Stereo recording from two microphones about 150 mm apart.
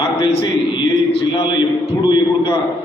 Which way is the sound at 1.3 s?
30° left (ahead or behind).